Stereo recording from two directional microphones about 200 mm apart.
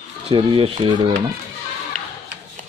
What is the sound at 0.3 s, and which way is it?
Speech, 25° right (ahead or behind).